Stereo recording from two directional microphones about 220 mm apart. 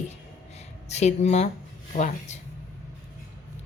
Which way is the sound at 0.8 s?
30° left (ahead or behind).